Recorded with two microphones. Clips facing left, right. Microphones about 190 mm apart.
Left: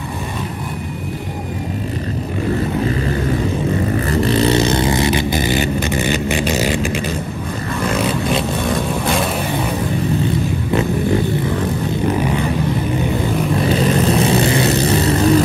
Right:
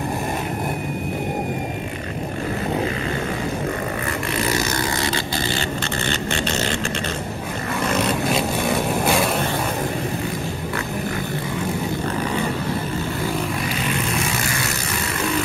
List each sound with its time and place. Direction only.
4.1 s vehicle: 30° left (ahead or behind); by 6.8 s 15° left (ahead or behind)
8.0 s vehicle: centre (ahead or behind)
12.1 s vehicle: 10° left (ahead or behind)
13.7 s vehicle: 35° left (ahead or behind)